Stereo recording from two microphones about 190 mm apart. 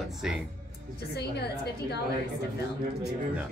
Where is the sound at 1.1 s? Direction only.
60° left (ahead or behind).